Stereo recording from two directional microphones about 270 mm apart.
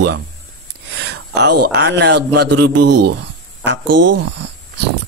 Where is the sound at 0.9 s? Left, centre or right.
Right.